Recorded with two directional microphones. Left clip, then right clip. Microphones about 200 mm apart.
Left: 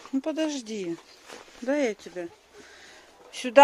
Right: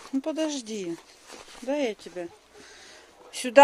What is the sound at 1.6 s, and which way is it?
Speech, 25° left (ahead or behind).